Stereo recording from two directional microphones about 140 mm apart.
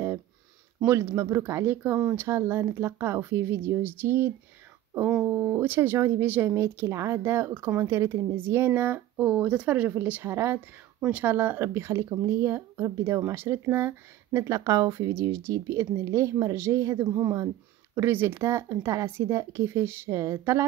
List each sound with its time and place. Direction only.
0.8 s speech: 20° right (ahead or behind)